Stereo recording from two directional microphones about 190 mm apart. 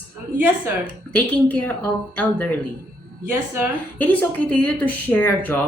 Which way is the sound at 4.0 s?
10° left (ahead or behind).